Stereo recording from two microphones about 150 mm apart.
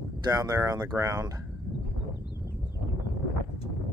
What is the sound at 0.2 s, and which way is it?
Speech, 25° right (ahead or behind).